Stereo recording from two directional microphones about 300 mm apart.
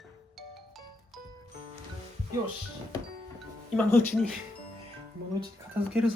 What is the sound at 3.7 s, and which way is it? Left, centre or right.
Speech, centre.